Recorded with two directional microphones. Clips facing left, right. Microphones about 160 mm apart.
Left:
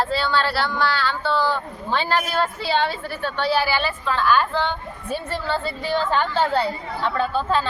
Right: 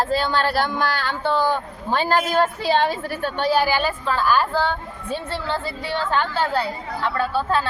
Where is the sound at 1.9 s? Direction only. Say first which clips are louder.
Right 3 dB; 45° right (ahead or behind).